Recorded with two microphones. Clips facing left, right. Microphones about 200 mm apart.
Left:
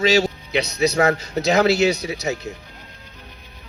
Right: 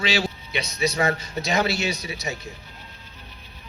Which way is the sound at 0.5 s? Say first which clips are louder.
Left 6 dB; 70° left (ahead or behind).